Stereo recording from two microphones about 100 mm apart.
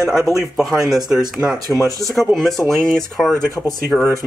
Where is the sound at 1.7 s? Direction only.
30° right (ahead or behind).